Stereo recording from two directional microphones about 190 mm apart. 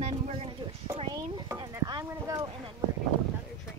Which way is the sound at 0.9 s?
25° right (ahead or behind).